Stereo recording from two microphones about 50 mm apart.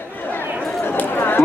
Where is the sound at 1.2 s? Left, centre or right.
Left.